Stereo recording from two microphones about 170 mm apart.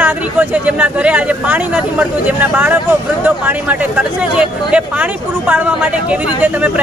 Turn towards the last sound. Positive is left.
turn(degrees=-10)  # may be behind; listen again after turning